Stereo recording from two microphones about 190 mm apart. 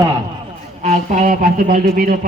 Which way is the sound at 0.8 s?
40° right (ahead or behind).